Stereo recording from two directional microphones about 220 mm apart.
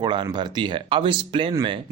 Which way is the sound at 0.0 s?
20° right (ahead or behind).